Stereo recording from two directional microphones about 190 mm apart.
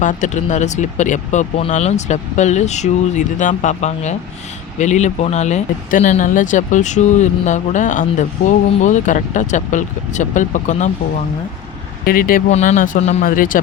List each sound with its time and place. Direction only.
0.0 s speech: 40° left (ahead or behind)
12.0 s speech: 50° left (ahead or behind)
12.5 s speech: 35° left (ahead or behind)
13.2 s speech: 45° left (ahead or behind)